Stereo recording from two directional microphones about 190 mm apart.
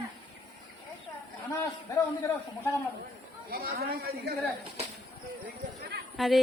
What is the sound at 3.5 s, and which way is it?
Speech, 55° right (ahead or behind).